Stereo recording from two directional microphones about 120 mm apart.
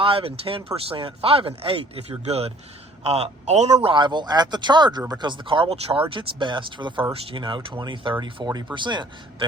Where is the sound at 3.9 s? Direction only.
40° right (ahead or behind).